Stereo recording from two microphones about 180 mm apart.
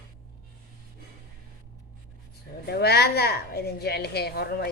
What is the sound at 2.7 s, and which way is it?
A woman's voice, 60° left (ahead or behind).